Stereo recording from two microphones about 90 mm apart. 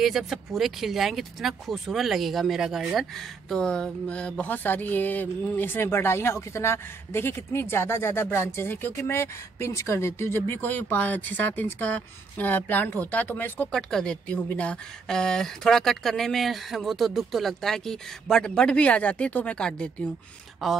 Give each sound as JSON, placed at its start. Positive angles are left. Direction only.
{"t": 0.0, "sound": "speech", "side_deg": -5}
{"t": 13.7, "sound": "speech", "side_deg": 5}
{"t": 20.6, "sound": "speech", "side_deg": 0}